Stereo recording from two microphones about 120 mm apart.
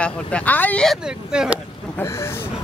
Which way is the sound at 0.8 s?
5° right (ahead or behind).